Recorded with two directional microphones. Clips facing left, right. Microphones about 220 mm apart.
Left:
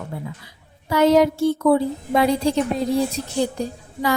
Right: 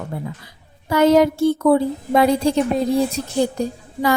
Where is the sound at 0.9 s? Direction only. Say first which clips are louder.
Right 2 dB; 50° right (ahead or behind).